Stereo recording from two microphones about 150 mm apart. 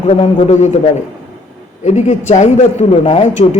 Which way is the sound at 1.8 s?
50° left (ahead or behind).